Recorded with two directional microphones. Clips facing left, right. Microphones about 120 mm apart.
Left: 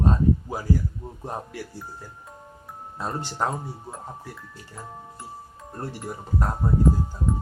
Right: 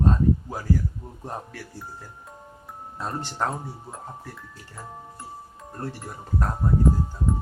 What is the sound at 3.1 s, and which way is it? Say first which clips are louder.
Speech: left 1 dB; 5° left (ahead or behind).